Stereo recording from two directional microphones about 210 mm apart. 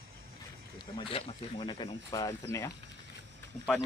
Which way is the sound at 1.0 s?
25° left (ahead or behind).